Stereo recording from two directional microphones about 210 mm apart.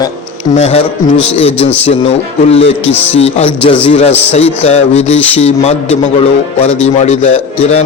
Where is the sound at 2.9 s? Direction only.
10° left (ahead or behind).